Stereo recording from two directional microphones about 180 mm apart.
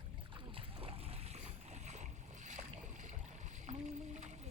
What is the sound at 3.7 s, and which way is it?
Rowboat, 40° right (ahead or behind).